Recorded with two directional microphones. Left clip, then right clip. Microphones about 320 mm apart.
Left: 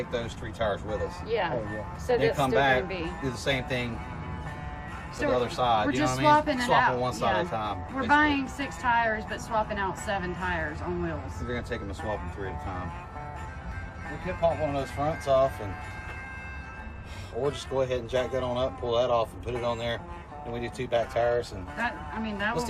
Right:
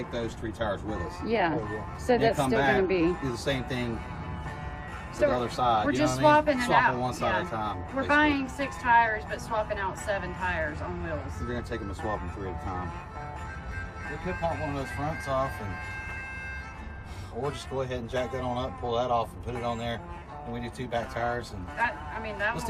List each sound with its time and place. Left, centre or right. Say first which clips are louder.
0.0 s speech: left 1 dB; centre
1.3 s speech: right 2 dB; right
2.1 s speech: left 1 dB; centre
5.2 s speech: right 1 dB; centre
14.3 s speech: left 5 dB; centre
17.4 s speech: left 4 dB; centre